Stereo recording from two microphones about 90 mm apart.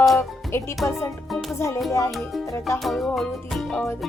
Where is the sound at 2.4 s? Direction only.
30° left (ahead or behind).